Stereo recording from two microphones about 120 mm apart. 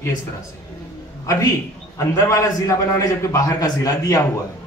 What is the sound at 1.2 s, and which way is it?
Speech, 30° left (ahead or behind).